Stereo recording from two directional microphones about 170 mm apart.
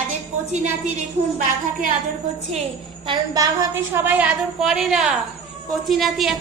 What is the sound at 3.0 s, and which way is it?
A woman's voice, 25° right (ahead or behind).